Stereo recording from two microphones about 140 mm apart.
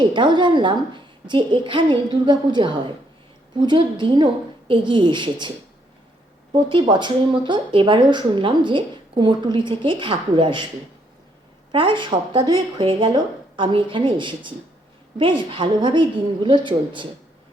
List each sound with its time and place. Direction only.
0.0 s speech: 35° right (ahead or behind)
6.5 s speech: 35° right (ahead or behind)
11.7 s speech: 35° right (ahead or behind)